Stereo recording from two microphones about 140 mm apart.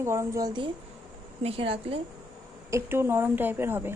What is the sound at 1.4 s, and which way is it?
Speech, 40° right (ahead or behind).